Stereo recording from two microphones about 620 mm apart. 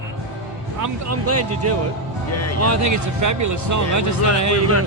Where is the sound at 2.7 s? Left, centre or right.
Right.